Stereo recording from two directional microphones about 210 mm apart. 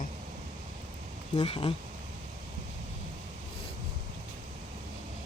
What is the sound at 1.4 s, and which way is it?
Speech, 25° left (ahead or behind).